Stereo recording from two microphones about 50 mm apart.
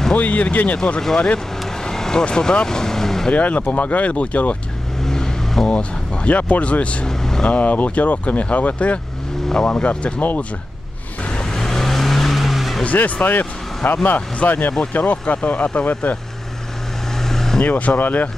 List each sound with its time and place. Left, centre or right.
0.2 s speech: left
1.0 s speech: centre
3.3 s speech: left
5.0 s vehicle: centre
5.7 s speech: left
7.1 s speech: centre
7.4 s speech: left
11.5 s vehicle: centre
12.8 s speech: left
14.7 s speech: centre
15.0 s speech: left
17.2 s vehicle: centre
17.6 s speech: left